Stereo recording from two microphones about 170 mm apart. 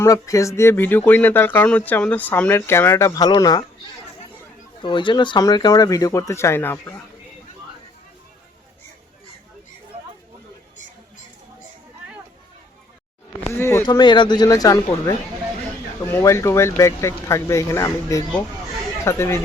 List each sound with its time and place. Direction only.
0.0 s speech: 20° left (ahead or behind)
4.8 s speech: 30° left (ahead or behind); by 7.0 s 10° left (ahead or behind)
13.5 s speech: 15° left (ahead or behind)